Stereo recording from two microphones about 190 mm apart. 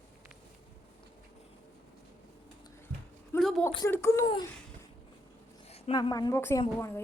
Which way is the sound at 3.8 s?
15° left (ahead or behind).